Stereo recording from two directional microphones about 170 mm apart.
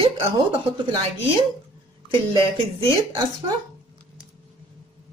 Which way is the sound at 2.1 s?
30° right (ahead or behind).